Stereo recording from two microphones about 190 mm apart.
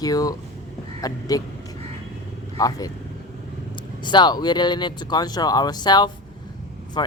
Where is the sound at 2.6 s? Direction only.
20° left (ahead or behind).